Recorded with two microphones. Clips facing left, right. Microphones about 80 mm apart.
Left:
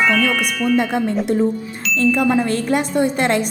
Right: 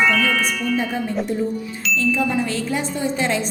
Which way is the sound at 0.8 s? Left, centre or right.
Left.